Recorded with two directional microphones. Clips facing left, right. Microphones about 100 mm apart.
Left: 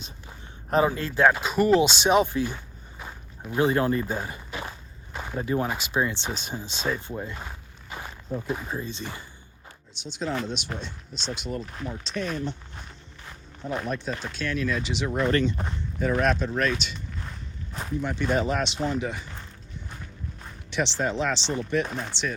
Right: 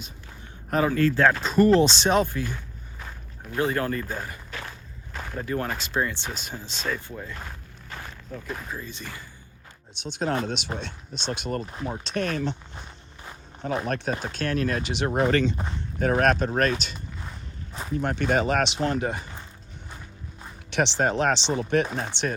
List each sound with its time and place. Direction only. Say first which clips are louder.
0.0 s speech: even; 20° left (ahead or behind)
8.7 s speech: left 3 dB; 20° left (ahead or behind)
9.9 s speech: right 3 dB; 55° right (ahead or behind); by 10.7 s 75° right (ahead or behind)
11.3 s speech: right 3 dB; 60° right (ahead or behind)
13.7 s speech: right 2 dB; 75° right (ahead or behind)
14.1 s speech: right 3 dB; 50° right (ahead or behind)
18.0 s speech: right 2 dB; 60° right (ahead or behind); by 18.9 s 75° right (ahead or behind)
18.9 s speech: right 2 dB; 50° right (ahead or behind)
20.7 s speech: right 3 dB; 65° right (ahead or behind)
22.1 s speech: right 3 dB; 55° right (ahead or behind)